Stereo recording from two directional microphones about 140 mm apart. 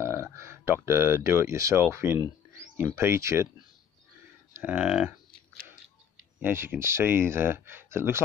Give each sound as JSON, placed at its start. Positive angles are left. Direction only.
{"t": 0.0, "sound": "speech", "side_deg": -20}
{"t": 4.6, "sound": "speech", "side_deg": -10}
{"t": 6.4, "sound": "speech", "side_deg": -15}